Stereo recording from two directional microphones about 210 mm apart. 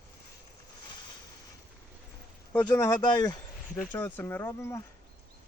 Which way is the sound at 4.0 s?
10° left (ahead or behind).